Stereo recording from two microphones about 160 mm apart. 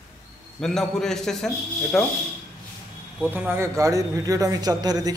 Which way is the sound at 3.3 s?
15° right (ahead or behind).